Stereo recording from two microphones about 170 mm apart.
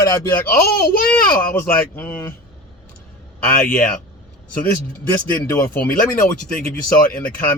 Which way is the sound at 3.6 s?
55° left (ahead or behind).